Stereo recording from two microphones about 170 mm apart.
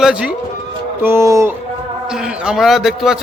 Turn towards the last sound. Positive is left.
turn(degrees=0)  # may be behind; listen again after turning